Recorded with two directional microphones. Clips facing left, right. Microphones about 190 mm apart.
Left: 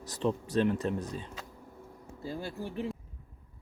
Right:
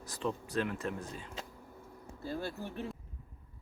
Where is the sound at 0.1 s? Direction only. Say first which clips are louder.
Left 6 dB; 25° left (ahead or behind).